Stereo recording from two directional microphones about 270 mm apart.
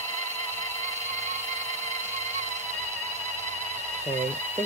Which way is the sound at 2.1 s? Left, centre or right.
Right.